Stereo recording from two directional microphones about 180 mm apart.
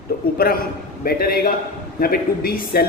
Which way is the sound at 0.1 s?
50° left (ahead or behind).